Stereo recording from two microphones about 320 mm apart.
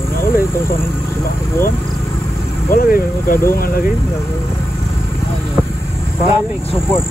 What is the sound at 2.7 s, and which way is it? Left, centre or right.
Speech, left.